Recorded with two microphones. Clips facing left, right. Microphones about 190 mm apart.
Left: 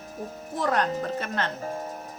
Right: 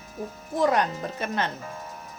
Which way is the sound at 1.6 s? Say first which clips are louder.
Left 6 dB; 40° left (ahead or behind).